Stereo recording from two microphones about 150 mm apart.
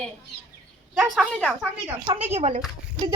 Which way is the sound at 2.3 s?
45° right (ahead or behind).